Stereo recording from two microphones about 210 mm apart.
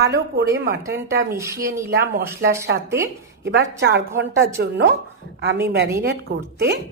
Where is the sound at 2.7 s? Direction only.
55° right (ahead or behind).